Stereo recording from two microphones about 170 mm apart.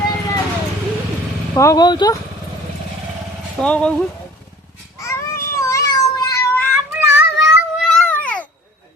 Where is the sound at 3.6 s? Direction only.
5° left (ahead or behind).